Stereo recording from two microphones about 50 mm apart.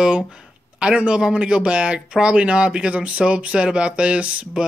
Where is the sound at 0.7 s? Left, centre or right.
Right.